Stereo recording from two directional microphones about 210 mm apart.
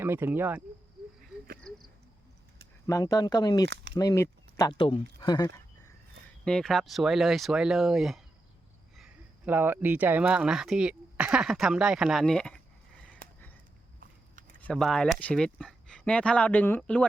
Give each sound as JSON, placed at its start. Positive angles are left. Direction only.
{"t": 0.0, "sound": "speech", "side_deg": -10}
{"t": 1.7, "sound": "a sound", "side_deg": 5}
{"t": 2.8, "sound": "speech", "side_deg": 15}
{"t": 6.4, "sound": "speech", "side_deg": 5}
{"t": 9.5, "sound": "speech", "side_deg": -10}
{"t": 13.0, "sound": "a sound", "side_deg": 5}
{"t": 14.6, "sound": "speech", "side_deg": 0}